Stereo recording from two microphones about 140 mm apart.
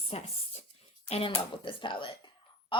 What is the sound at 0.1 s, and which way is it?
Speech, 45° left (ahead or behind).